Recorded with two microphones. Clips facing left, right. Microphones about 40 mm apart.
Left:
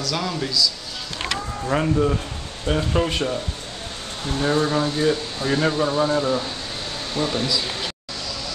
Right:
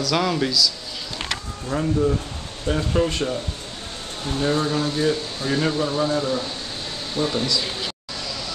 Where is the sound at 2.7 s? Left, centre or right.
Centre.